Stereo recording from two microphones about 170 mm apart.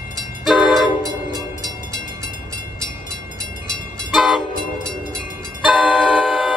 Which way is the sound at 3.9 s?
Centre (ahead or behind).